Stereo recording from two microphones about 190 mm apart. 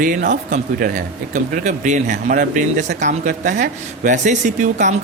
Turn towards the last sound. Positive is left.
turn(degrees=-40)  # may be behind; listen again after turning